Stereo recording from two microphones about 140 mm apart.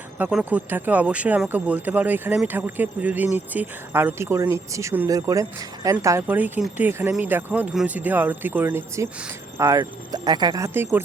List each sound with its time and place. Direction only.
0.2 s speech: 10° right (ahead or behind)
6.2 s speech: 10° right (ahead or behind)